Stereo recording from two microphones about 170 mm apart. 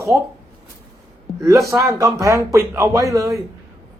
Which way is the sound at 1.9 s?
20° right (ahead or behind).